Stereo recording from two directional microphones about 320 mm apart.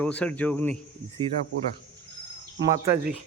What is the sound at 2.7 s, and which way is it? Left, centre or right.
Speech, centre.